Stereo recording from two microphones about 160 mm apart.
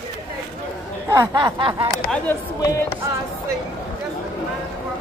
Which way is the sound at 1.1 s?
25° right (ahead or behind).